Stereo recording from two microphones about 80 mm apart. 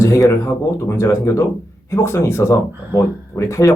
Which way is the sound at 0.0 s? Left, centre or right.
Left.